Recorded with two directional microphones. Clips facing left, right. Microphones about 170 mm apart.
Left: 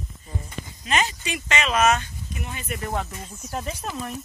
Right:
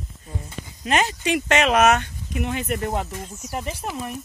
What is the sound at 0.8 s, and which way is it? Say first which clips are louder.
Speech: right 4 dB; 55° right (ahead or behind).